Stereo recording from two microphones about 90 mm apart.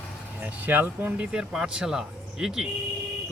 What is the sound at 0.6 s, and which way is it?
Speech, 20° right (ahead or behind).